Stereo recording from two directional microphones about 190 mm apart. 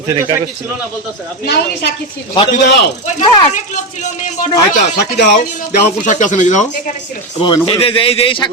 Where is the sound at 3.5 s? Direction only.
40° left (ahead or behind).